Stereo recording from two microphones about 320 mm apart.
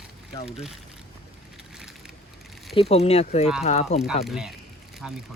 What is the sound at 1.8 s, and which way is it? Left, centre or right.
Vehicle, centre.